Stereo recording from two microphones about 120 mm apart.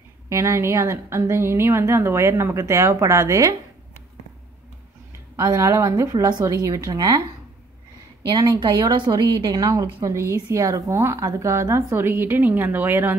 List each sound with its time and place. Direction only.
0.3 s a woman's voice: 25° right (ahead or behind)
5.3 s a woman's voice: 30° right (ahead or behind)
8.3 s a woman's voice: 35° right (ahead or behind); by 13.1 s 15° right (ahead or behind)